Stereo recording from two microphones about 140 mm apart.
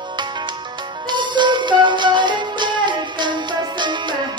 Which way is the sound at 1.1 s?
35° right (ahead or behind).